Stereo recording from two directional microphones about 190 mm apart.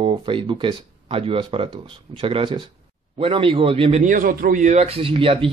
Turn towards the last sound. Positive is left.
turn(degrees=-30)  # may be behind; listen again after turning